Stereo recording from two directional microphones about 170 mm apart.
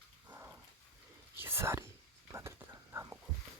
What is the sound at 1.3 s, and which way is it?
Whispering, 15° right (ahead or behind).